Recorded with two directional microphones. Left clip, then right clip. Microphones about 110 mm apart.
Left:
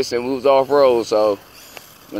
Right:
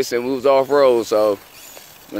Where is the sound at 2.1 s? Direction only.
65° right (ahead or behind).